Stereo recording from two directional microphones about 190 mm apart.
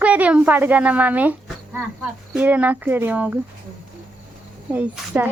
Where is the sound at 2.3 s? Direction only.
10° right (ahead or behind).